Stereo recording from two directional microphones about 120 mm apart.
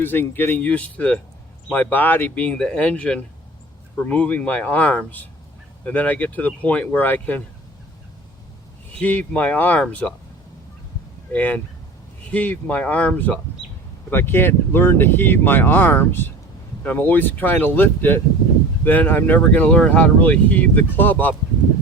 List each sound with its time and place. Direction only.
0.0 s speech: 15° left (ahead or behind)
9.0 s speech: 10° left (ahead or behind)
11.3 s speech: 15° left (ahead or behind)
13.6 s a sound: 45° left (ahead or behind)
14.1 s speech: 20° left (ahead or behind)